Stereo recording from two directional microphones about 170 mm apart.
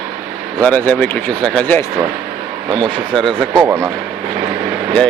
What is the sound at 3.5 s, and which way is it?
Speech, 20° right (ahead or behind).